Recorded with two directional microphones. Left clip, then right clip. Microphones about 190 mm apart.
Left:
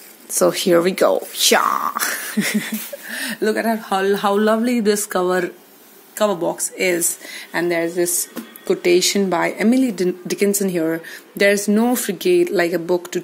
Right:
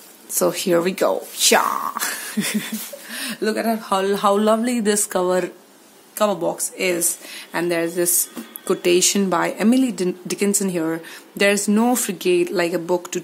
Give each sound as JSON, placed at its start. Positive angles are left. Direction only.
{"t": 0.3, "sound": "a woman's voice", "side_deg": 15}